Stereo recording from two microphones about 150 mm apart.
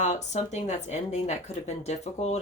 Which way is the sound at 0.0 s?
50° left (ahead or behind).